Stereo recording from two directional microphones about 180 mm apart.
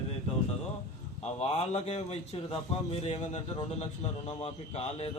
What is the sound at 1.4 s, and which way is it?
A man's voice, 35° left (ahead or behind).